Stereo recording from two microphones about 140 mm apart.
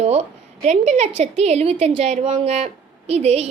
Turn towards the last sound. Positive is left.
turn(degrees=-50)  # may be behind; listen again after turning